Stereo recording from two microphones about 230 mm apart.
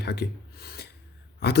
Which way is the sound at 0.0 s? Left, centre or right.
Left.